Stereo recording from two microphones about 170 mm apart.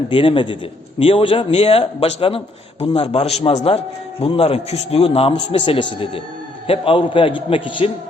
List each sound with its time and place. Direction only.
0.1 s a man's voice: 30° left (ahead or behind)